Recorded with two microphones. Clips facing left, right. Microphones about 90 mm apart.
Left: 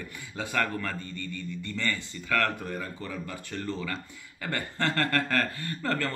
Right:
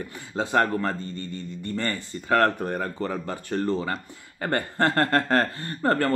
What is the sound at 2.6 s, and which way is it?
Speech, 50° right (ahead or behind).